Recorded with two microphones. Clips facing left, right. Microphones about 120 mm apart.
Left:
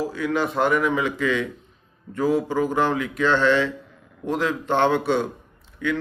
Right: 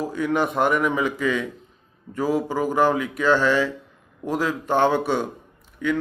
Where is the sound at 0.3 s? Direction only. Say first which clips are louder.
Even; 20° right (ahead or behind).